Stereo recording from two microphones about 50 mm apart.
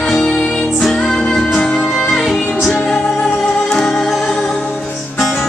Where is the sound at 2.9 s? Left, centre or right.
Left.